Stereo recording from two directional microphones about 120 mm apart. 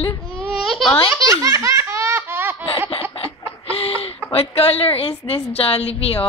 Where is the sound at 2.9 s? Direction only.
50° left (ahead or behind).